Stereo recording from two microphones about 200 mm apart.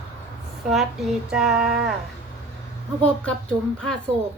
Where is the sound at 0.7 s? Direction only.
Centre (ahead or behind).